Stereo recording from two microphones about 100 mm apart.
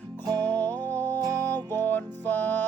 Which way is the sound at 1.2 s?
35° right (ahead or behind).